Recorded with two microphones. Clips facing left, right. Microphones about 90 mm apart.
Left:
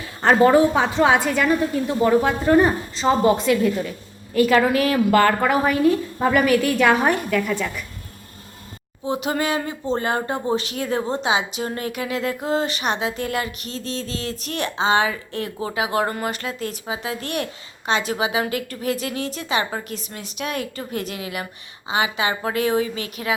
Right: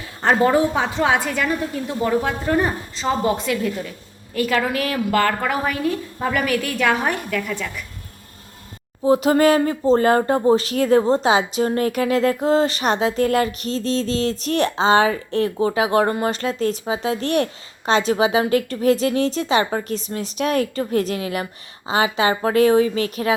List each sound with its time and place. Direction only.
0.2 s speech: 70° left (ahead or behind)
0.9 s a woman's voice: 30° left (ahead or behind)
9.0 s speech: 40° right (ahead or behind)